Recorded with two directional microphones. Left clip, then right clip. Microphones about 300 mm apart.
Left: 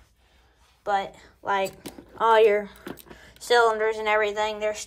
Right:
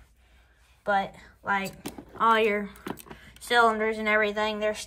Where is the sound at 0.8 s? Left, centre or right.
Centre.